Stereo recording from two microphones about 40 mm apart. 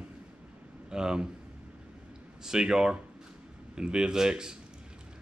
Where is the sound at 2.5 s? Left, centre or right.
Centre.